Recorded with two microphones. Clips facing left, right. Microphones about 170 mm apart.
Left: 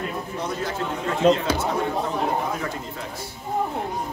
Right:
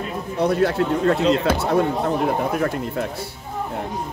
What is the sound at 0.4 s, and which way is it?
Speech, 65° right (ahead or behind).